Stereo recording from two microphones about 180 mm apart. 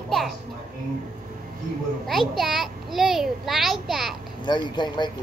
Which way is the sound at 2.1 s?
Centre (ahead or behind).